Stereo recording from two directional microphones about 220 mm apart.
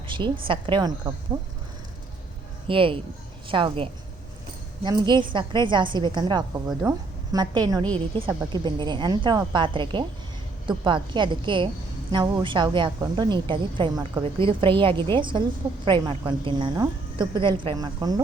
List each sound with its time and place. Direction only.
0.1 s a woman's voice: 20° right (ahead or behind)
2.6 s a woman's voice: 25° right (ahead or behind)
6.8 s speech: 5° right (ahead or behind)
7.3 s a woman's voice: 20° right (ahead or behind)